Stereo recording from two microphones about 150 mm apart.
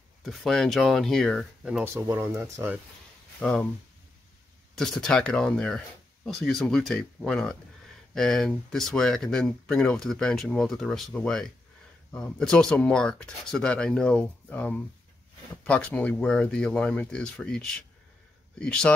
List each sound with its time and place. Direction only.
0.2 s speech: centre (ahead or behind)
2.0 s speech: 20° right (ahead or behind)
3.3 s speech: 10° left (ahead or behind)
4.7 s speech: 5° left (ahead or behind)